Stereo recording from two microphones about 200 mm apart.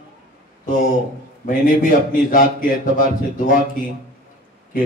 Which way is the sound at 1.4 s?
45° left (ahead or behind).